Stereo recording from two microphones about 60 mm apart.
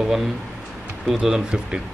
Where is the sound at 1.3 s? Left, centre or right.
Centre.